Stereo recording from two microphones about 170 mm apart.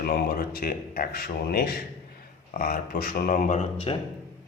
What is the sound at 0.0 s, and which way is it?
Speech, 60° left (ahead or behind).